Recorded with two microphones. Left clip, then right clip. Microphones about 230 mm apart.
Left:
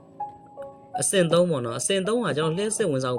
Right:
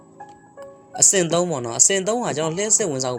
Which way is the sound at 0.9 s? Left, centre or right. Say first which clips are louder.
Right 2 dB; centre.